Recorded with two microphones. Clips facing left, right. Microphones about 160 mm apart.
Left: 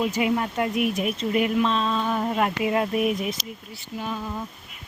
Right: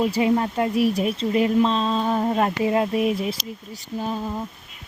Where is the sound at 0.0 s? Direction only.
30° right (ahead or behind).